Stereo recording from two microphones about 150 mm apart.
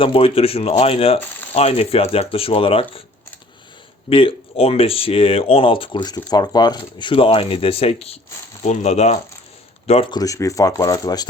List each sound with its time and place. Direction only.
0.0 s speech: 35° left (ahead or behind)
4.1 s speech: 35° left (ahead or behind)
10.1 s speech: 25° left (ahead or behind)